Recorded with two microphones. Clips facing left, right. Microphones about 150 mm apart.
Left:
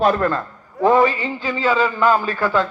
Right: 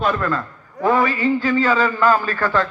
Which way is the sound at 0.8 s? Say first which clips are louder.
Left 2 dB; 25° left (ahead or behind).